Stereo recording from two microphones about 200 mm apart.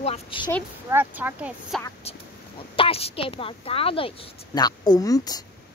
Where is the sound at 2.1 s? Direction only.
30° left (ahead or behind).